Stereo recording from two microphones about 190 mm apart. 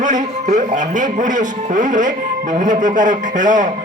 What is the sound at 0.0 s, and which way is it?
A man's voice, 40° right (ahead or behind).